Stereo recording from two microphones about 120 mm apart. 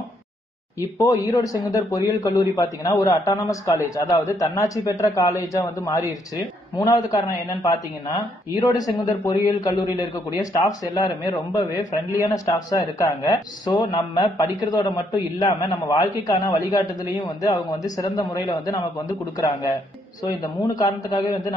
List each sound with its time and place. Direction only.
0.9 s a man's voice: 30° left (ahead or behind)